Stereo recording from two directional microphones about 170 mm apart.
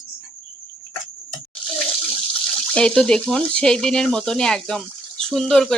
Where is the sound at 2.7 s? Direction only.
5° left (ahead or behind).